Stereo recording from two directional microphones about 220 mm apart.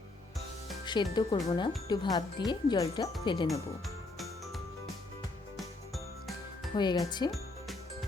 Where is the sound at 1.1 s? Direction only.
20° left (ahead or behind).